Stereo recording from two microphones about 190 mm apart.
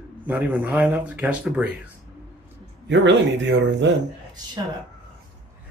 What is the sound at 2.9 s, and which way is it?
Speech, 70° right (ahead or behind).